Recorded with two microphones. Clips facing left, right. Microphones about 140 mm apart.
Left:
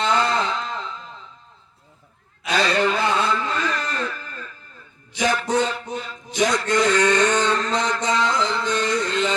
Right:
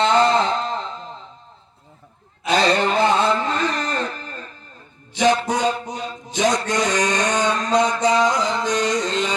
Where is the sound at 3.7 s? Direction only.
45° right (ahead or behind).